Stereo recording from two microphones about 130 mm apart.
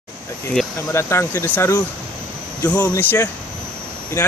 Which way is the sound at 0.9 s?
20° left (ahead or behind).